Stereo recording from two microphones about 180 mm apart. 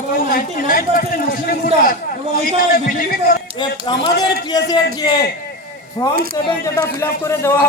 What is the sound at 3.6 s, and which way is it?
A man's voice, 25° left (ahead or behind).